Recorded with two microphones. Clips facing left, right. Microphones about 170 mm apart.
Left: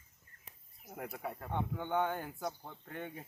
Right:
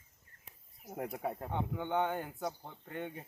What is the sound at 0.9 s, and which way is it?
Speech, 25° right (ahead or behind).